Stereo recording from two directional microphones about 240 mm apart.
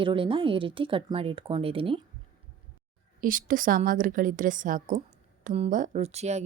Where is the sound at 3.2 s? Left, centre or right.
Right.